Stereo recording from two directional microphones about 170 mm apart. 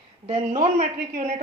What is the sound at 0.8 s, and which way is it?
Speech, 45° right (ahead or behind).